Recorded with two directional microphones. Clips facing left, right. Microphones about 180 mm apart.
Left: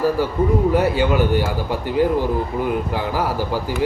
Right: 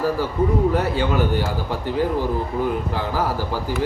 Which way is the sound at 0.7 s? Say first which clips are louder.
Left 4 dB; 10° left (ahead or behind).